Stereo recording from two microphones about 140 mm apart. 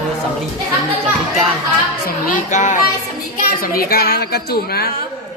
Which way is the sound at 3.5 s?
90° left.